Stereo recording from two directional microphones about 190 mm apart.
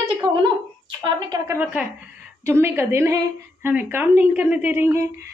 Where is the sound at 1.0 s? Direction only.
20° right (ahead or behind).